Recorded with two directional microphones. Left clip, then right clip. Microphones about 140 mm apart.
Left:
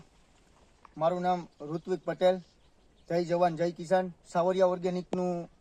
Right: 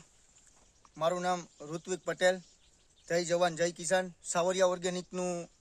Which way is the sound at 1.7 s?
30° right (ahead or behind).